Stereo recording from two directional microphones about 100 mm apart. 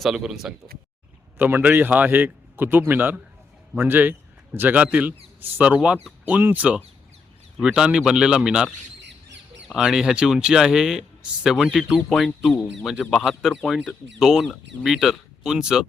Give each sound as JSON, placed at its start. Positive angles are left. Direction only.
{"t": 0.0, "sound": "speech", "side_deg": -5}
{"t": 1.4, "sound": "a man's voice", "side_deg": -20}